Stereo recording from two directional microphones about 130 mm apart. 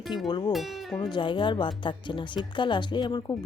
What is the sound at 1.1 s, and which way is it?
Speech, 40° left (ahead or behind).